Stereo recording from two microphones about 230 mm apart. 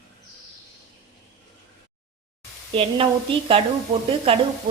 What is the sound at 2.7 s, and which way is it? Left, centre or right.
Speech, right.